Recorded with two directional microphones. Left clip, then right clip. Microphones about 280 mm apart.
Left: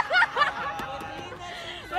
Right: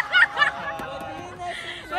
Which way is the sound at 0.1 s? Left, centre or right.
Centre.